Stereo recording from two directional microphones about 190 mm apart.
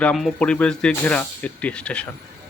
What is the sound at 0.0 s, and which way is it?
A man's voice, 5° left (ahead or behind).